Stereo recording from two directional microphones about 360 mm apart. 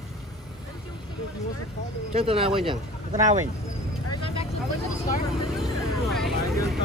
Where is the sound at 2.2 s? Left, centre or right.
Centre.